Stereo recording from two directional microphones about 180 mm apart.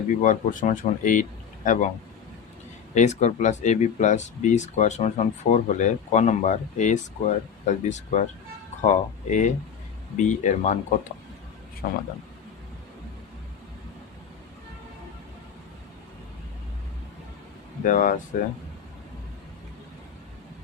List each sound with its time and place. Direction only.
0.2 s speech: 45° left (ahead or behind)
2.9 s speech: 40° left (ahead or behind)
11.8 s speech: 55° left (ahead or behind)
17.8 s speech: 45° left (ahead or behind)